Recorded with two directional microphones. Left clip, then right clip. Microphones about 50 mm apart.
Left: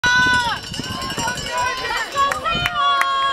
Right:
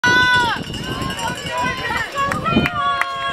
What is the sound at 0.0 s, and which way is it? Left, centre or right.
Run, right.